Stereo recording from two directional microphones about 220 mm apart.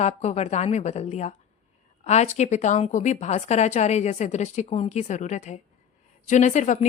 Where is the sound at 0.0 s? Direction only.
30° left (ahead or behind).